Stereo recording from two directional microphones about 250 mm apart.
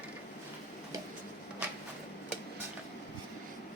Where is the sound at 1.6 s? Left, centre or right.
Centre.